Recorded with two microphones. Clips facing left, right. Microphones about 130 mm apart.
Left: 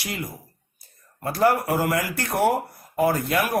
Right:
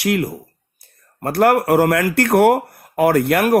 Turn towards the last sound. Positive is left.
turn(degrees=-70)  # may be behind; listen again after turning